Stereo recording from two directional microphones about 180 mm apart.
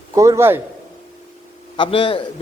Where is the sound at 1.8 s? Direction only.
30° left (ahead or behind).